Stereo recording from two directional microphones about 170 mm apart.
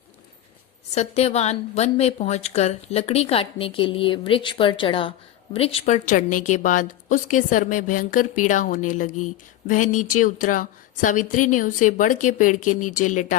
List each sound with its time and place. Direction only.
0.9 s a woman's voice: 40° left (ahead or behind)